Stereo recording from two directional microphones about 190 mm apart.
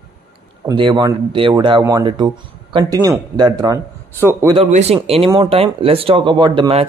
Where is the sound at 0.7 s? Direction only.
25° right (ahead or behind).